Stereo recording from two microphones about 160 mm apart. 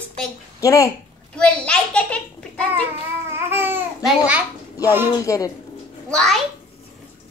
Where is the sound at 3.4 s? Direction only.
15° right (ahead or behind).